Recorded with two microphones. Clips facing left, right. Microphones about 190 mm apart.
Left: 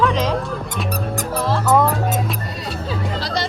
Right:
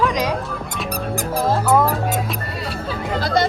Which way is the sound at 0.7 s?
Centre (ahead or behind).